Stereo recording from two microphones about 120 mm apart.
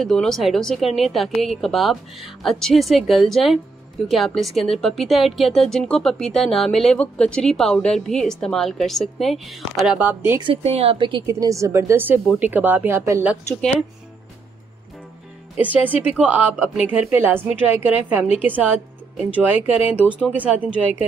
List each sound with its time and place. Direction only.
0.0 s a woman's voice: 5° left (ahead or behind)
9.9 s a woman's voice: 15° right (ahead or behind)
10.4 s speech: 55° right (ahead or behind)
11.2 s a woman's voice: 25° right (ahead or behind)
15.6 s a woman's voice: 15° right (ahead or behind)